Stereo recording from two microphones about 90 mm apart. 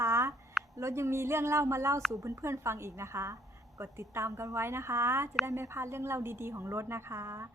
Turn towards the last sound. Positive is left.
turn(degrees=-30)  # may be behind; listen again after turning